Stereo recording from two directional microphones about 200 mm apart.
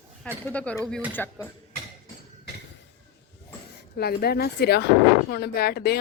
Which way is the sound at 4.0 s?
50° left (ahead or behind).